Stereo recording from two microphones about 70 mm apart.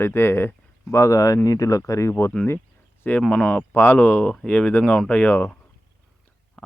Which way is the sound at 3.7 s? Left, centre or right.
Left.